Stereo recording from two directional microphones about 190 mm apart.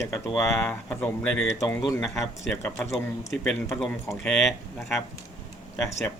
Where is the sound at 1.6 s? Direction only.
20° left (ahead or behind).